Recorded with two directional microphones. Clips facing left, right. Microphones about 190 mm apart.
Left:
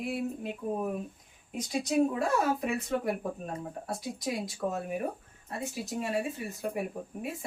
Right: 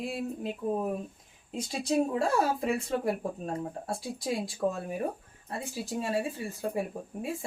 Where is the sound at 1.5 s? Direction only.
30° right (ahead or behind).